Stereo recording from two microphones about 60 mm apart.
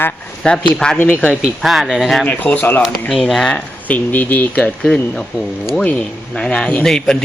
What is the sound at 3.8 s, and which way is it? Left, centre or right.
Speech, left.